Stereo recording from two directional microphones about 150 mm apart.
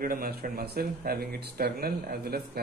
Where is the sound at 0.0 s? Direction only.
80° right.